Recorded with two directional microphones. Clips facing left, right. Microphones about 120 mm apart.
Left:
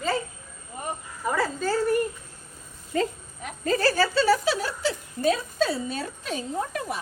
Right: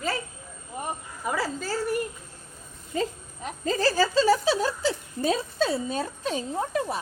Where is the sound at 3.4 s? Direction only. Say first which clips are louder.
Left 2 dB; 25° right (ahead or behind).